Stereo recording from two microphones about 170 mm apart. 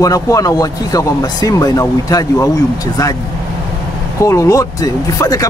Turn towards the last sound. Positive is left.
turn(degrees=20)  # may be behind; listen again after turning